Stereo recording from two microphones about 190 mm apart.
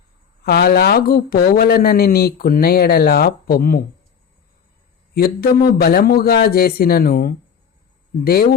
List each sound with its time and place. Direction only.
0.4 s speech: 55° left (ahead or behind)
5.1 s speech: 55° left (ahead or behind)